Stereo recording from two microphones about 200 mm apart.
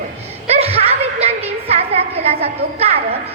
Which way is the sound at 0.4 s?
30° right (ahead or behind).